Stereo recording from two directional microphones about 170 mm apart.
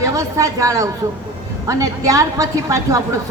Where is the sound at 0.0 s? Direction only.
20° right (ahead or behind).